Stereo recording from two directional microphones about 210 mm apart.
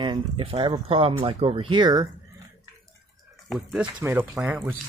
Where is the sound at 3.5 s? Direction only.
5° right (ahead or behind).